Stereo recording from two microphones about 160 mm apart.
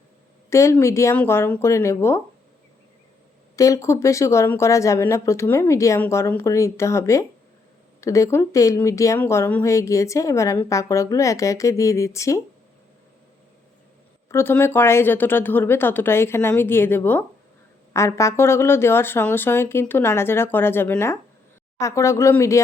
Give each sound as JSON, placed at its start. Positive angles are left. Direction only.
{"t": 0.5, "sound": "speech", "side_deg": 20}
{"t": 3.5, "sound": "speech", "side_deg": 20}
{"t": 14.3, "sound": "speech", "side_deg": 15}